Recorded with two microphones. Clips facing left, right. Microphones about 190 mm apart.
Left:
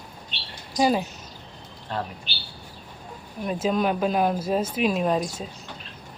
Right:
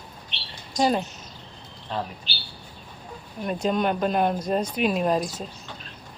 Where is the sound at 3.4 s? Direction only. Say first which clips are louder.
Even; centre (ahead or behind).